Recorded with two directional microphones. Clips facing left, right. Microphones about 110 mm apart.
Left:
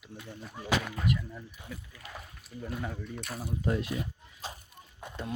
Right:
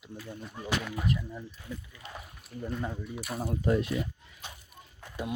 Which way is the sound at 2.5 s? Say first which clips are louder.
Right 3 dB; 50° right (ahead or behind).